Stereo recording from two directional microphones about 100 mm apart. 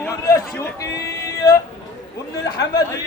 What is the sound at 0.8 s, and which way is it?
Music, 35° left (ahead or behind).